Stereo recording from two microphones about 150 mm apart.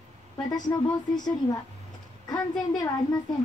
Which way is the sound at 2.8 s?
25° left (ahead or behind).